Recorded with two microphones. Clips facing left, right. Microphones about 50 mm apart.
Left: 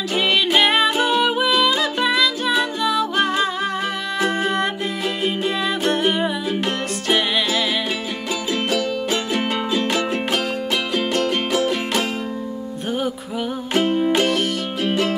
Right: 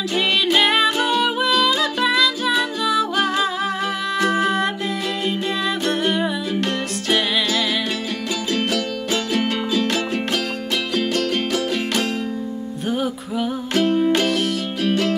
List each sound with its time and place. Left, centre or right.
0.1 s music: centre
5.9 s music: centre
13.7 s music: centre
14.8 s music: centre